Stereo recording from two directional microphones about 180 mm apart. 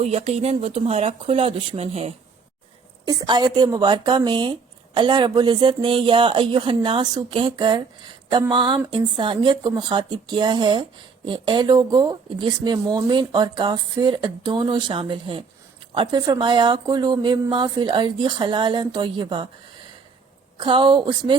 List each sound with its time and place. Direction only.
0.0 s speech: 35° right (ahead or behind)
3.1 s speech: 25° right (ahead or behind)
20.6 s speech: 25° right (ahead or behind)